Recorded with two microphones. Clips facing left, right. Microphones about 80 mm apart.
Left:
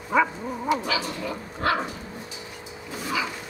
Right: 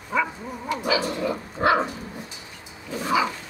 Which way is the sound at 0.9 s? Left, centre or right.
Centre.